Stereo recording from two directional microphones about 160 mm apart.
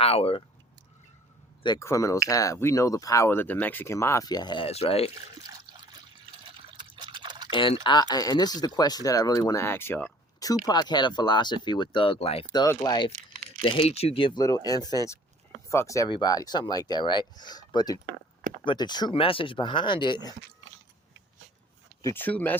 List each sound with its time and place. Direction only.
0.0 s speech: 40° left (ahead or behind)
1.6 s speech: 20° left (ahead or behind); by 5.1 s 40° left (ahead or behind)
6.7 s drip: 30° right (ahead or behind)
7.5 s speech: 30° left (ahead or behind)
12.5 s speech: 25° left (ahead or behind)
13.6 s speech: 35° left (ahead or behind)
22.0 s speech: 10° left (ahead or behind)